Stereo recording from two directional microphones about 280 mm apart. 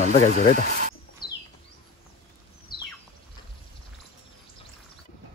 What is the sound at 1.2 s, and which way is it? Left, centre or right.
Bird, centre.